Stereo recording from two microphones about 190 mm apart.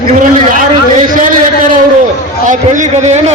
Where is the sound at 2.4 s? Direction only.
40° right (ahead or behind).